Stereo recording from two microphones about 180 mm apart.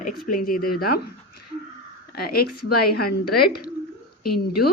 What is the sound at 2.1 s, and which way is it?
A woman's voice, 55° left (ahead or behind).